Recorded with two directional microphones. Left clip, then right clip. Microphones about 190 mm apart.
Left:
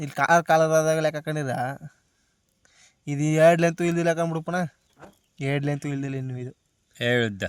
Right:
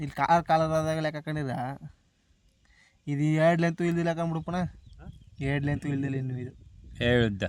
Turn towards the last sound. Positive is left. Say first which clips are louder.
# left 2 dB
turn(degrees=-15)  # may be behind; listen again after turning